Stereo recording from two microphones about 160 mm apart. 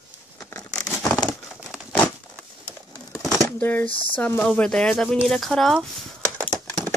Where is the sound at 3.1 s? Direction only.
20° right (ahead or behind).